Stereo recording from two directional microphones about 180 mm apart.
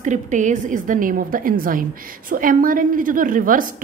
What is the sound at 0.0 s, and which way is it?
A woman's voice, 45° right (ahead or behind).